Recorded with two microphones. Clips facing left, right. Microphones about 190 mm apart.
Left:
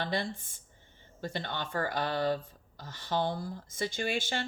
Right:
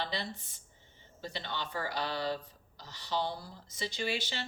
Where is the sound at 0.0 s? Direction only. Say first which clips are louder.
Left 4 dB; 50° left (ahead or behind).